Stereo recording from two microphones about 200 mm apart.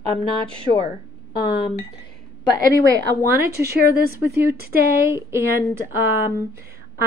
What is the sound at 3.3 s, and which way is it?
Speech, 10° right (ahead or behind).